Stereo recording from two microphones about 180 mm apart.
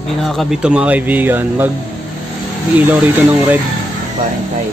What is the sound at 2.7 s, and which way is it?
Speech, 10° right (ahead or behind).